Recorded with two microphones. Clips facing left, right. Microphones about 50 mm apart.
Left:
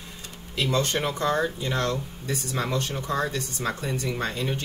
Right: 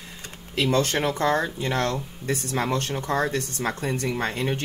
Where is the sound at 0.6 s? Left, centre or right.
Right.